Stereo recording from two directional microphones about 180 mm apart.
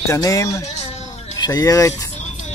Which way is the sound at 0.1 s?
20° left (ahead or behind).